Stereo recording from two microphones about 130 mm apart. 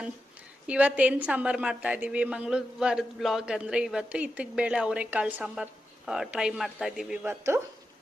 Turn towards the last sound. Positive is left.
turn(degrees=-20)  # may be behind; listen again after turning